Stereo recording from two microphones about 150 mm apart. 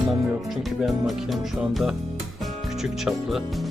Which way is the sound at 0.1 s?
Centre (ahead or behind).